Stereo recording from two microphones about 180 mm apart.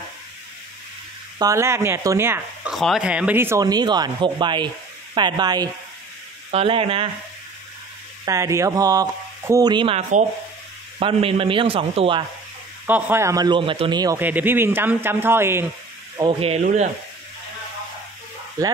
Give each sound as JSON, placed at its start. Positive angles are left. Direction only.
{"t": 1.4, "sound": "speech", "side_deg": -15}
{"t": 2.7, "sound": "a man's voice", "side_deg": 0}
{"t": 8.3, "sound": "a man's voice", "side_deg": -15}
{"t": 12.8, "sound": "speech", "side_deg": -10}
{"t": 14.1, "sound": "speech", "side_deg": -10}
{"t": 16.2, "sound": "a man's voice", "side_deg": -30}
{"t": 18.6, "sound": "speech", "side_deg": -20}